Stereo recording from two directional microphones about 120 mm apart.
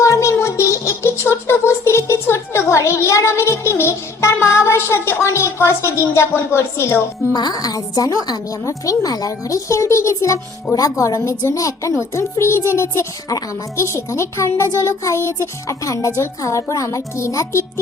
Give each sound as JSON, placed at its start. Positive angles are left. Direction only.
{"t": 0.0, "sound": "music", "side_deg": 25}
{"t": 5.2, "sound": "a woman's voice", "side_deg": 25}
{"t": 7.3, "sound": "a woman's voice", "side_deg": 35}